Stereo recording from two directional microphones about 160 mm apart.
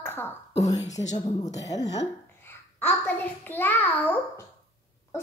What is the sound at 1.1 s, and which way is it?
Speech, 25° left (ahead or behind).